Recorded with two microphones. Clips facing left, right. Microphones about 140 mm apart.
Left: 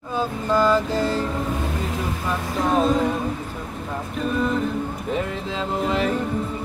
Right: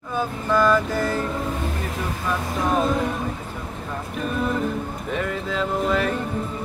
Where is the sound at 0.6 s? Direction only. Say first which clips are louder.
Even; 30° left (ahead or behind).